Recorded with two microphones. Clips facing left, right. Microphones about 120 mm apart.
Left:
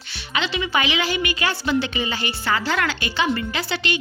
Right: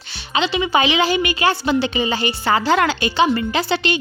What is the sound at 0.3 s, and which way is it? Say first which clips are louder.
A woman's voice: right 5 dB; 25° right (ahead or behind).